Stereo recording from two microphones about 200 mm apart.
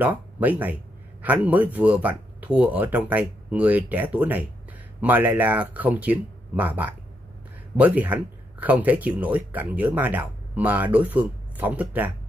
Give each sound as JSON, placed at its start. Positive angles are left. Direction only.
{"t": 0.0, "sound": "speech", "side_deg": -10}